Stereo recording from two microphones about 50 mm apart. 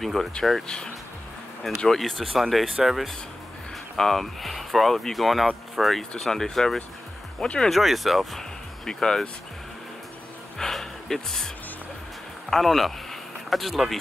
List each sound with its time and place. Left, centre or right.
0.0 s speech: centre
1.8 s speech: centre
7.7 s speech: centre
10.6 s a sound: centre
12.4 s speech: centre